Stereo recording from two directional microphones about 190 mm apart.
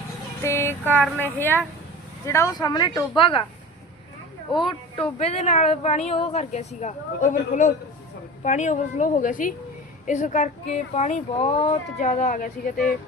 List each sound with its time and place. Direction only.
0.4 s a sound: 10° left (ahead or behind)
0.9 s speech: 10° right (ahead or behind)
1.2 s a woman's voice: 10° left (ahead or behind); by 3.4 s 25° left (ahead or behind)
5.2 s a woman's voice: 35° left (ahead or behind)